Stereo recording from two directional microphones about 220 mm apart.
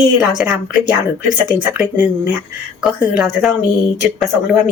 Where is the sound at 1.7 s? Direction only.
10° right (ahead or behind).